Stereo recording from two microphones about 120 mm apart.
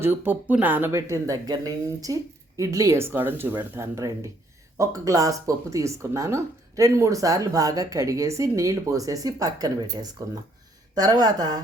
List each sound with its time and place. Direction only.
0.0 s a woman's voice: 15° right (ahead or behind); by 11.6 s 35° right (ahead or behind)